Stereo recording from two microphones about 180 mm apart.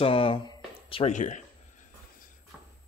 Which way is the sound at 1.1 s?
45° left (ahead or behind).